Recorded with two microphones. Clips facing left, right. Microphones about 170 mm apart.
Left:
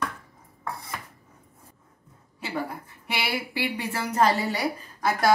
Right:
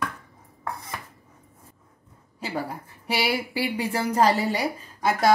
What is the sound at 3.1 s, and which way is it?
A woman's voice, 35° right (ahead or behind).